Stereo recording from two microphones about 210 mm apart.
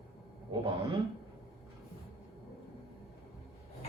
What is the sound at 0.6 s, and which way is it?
Speech, 20° right (ahead or behind).